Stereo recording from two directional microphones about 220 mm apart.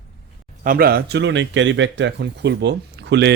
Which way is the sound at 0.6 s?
40° right (ahead or behind).